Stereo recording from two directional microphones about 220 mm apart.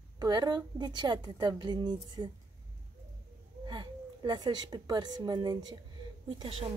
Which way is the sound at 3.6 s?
20° right (ahead or behind).